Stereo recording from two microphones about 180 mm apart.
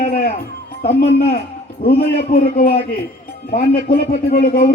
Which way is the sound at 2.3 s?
50° left (ahead or behind).